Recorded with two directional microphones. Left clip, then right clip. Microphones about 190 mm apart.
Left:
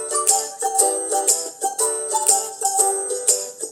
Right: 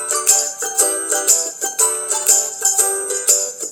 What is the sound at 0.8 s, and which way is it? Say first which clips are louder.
Music: right 1 dB; 45° right (ahead or behind).